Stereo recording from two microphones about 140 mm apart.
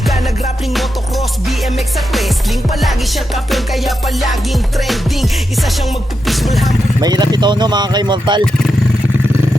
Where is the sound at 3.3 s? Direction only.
Centre (ahead or behind).